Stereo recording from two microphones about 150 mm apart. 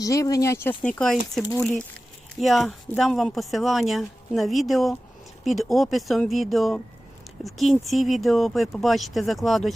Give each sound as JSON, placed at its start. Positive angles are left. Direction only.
{"t": 0.0, "sound": "speech", "side_deg": 25}
{"t": 1.4, "sound": "speech", "side_deg": 20}
{"t": 2.4, "sound": "speech", "side_deg": 0}